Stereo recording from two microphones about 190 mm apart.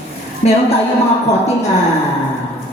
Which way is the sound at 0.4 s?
35° left (ahead or behind).